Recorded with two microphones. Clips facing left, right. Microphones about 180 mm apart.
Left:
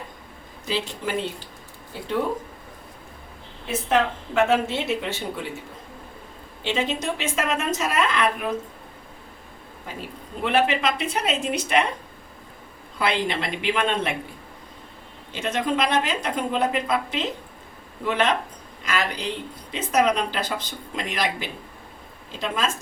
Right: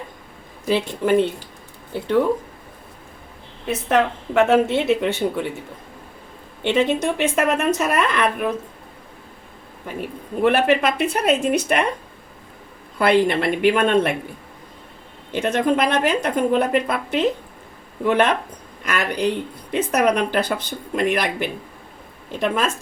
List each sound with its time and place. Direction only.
0.7 s speech: 55° right (ahead or behind)
3.7 s speech: 60° right (ahead or behind)
6.6 s speech: 60° right (ahead or behind)
10.4 s speech: 50° right (ahead or behind)
13.0 s speech: 55° right (ahead or behind)
15.3 s speech: 55° right (ahead or behind)